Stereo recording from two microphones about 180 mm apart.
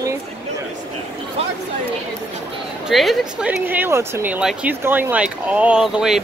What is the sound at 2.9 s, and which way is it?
Speech, centre (ahead or behind).